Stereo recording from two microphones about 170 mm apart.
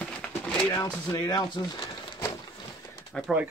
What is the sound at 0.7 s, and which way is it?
Speech, 20° left (ahead or behind).